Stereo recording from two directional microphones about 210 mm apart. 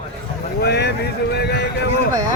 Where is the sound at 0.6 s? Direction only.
50° left (ahead or behind).